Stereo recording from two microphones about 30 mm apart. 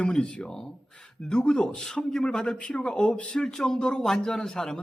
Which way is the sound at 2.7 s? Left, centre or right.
Left.